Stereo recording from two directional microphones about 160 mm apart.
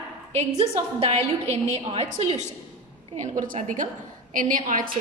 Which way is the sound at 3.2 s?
55° right (ahead or behind).